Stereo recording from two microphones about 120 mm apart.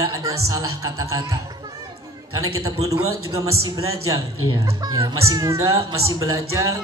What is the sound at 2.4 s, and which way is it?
Speech, 30° right (ahead or behind).